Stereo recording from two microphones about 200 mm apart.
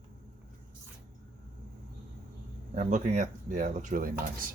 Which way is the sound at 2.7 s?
35° right (ahead or behind).